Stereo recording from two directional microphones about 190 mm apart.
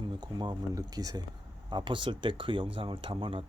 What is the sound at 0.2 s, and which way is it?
Speech, 20° right (ahead or behind).